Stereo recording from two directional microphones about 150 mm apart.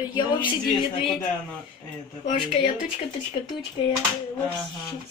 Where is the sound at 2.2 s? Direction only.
55° left (ahead or behind).